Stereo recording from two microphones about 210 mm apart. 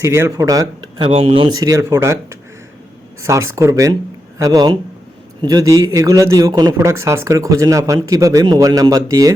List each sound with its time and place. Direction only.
0.0 s speech: 10° right (ahead or behind)
3.5 s speech: 15° right (ahead or behind)